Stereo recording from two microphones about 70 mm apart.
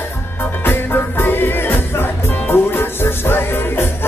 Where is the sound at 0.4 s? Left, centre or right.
Left.